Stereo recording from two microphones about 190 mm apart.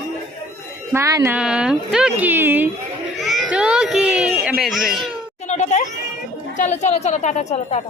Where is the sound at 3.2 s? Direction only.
Centre (ahead or behind).